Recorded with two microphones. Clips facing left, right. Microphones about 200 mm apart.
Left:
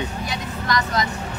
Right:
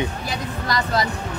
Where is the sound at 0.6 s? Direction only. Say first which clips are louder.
Even; 35° right (ahead or behind).